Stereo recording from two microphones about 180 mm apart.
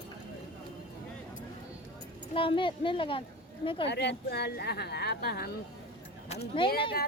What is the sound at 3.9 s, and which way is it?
Speech, 70° left (ahead or behind).